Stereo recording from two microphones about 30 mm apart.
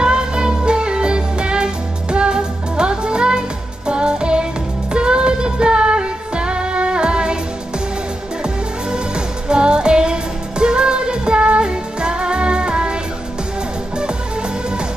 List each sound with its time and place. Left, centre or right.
0.0 s music: right
8.9 s music: right